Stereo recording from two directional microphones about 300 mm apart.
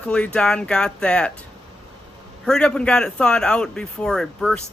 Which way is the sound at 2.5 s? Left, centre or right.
Centre.